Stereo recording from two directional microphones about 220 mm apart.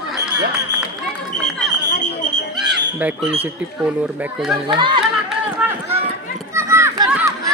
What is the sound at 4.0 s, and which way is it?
Speech, 5° right (ahead or behind).